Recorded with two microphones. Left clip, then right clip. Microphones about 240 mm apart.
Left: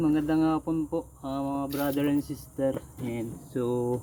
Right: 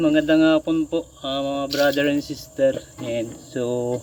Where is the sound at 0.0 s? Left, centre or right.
Left.